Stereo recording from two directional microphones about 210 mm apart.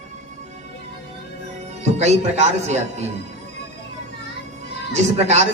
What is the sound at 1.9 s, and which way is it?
A man's voice, 30° right (ahead or behind).